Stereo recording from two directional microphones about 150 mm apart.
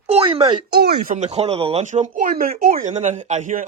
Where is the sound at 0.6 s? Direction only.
90° right.